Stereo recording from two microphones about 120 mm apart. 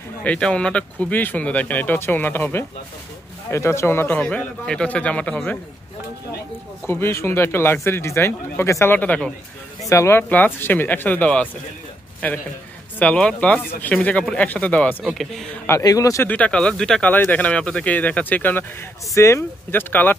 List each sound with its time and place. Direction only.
0.2 s speech: 10° left (ahead or behind)
6.9 s speech: 20° left (ahead or behind)
9.8 s speech: 25° left (ahead or behind)
13.0 s speech: 10° left (ahead or behind)
15.0 s speech: centre (ahead or behind)
15.8 s speech: 30° left (ahead or behind)
16.3 s speech: 10° left (ahead or behind)